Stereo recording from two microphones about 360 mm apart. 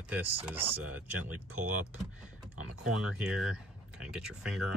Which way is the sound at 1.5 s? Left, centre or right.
Right.